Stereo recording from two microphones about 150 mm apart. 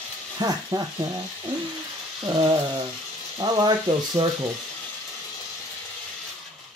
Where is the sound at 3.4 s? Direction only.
30° right (ahead or behind).